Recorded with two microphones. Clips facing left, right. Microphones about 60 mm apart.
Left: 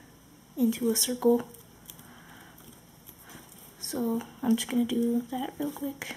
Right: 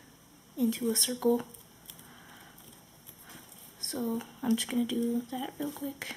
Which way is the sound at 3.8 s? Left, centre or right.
Centre.